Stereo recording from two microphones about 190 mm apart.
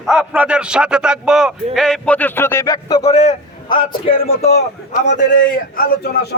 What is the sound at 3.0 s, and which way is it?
A man's voice, 35° left (ahead or behind).